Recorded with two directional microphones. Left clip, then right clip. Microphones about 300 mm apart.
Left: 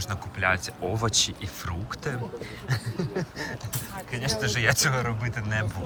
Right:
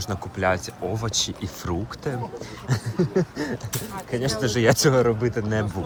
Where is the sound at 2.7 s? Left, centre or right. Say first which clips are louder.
Right 7 dB; right.